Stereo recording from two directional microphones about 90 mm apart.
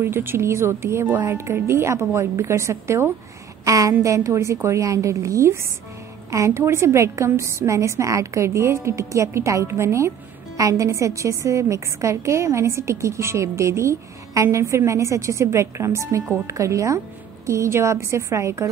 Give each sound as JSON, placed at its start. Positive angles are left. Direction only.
{"t": 0.0, "sound": "a woman's voice", "side_deg": -25}